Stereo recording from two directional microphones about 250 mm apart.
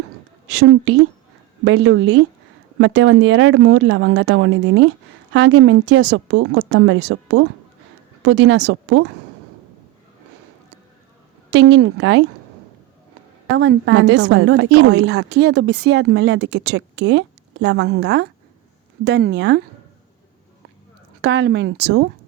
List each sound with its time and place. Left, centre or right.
0.5 s a woman's voice: right
11.5 s a woman's voice: right
13.6 s a woman's voice: right
21.2 s a woman's voice: right